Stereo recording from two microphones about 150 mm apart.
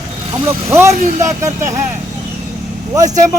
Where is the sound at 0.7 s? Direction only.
20° right (ahead or behind).